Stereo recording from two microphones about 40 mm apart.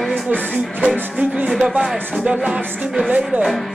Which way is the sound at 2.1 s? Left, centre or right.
Right.